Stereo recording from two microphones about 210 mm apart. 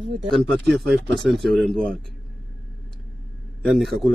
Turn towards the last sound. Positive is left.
turn(degrees=0)  # may be behind; listen again after turning